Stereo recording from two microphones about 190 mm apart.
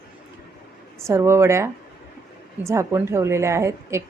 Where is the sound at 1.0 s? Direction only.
15° right (ahead or behind).